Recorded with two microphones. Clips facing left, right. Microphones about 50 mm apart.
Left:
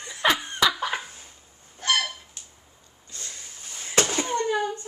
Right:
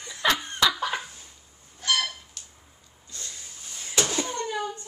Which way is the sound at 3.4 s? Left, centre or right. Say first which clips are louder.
Left 1 dB; left.